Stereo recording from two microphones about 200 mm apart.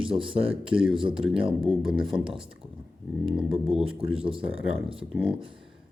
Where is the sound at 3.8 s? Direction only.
30° right (ahead or behind).